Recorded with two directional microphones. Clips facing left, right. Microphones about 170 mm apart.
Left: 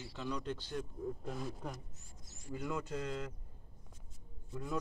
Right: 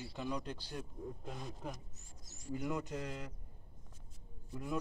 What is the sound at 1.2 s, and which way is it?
Speech, centre (ahead or behind).